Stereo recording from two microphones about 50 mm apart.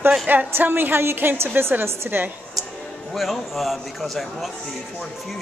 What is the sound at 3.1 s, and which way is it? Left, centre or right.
Speech, centre.